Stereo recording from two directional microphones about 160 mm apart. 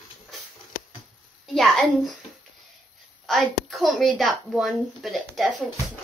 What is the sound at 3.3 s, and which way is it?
A woman's voice, centre (ahead or behind).